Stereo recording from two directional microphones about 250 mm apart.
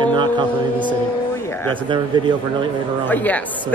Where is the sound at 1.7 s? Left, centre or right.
Centre.